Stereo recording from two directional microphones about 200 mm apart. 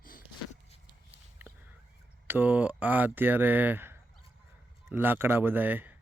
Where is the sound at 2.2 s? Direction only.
10° right (ahead or behind).